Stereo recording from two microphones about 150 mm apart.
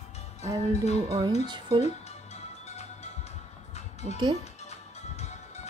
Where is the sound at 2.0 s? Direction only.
45° left (ahead or behind).